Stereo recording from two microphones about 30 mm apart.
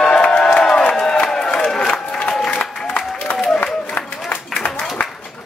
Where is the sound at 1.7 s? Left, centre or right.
Centre.